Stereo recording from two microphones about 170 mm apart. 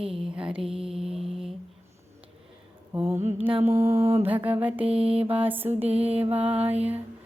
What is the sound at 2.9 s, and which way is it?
Mantra, 15° right (ahead or behind).